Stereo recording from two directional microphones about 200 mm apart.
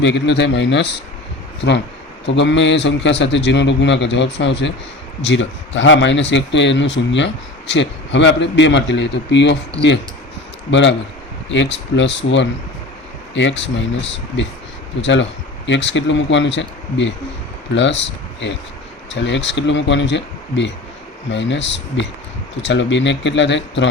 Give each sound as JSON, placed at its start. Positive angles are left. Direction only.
{"t": 0.0, "sound": "a man's voice", "side_deg": 60}
{"t": 2.2, "sound": "a man's voice", "side_deg": 60}
{"t": 10.7, "sound": "a man's voice", "side_deg": 65}